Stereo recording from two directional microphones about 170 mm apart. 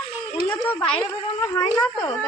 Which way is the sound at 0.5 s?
10° left (ahead or behind).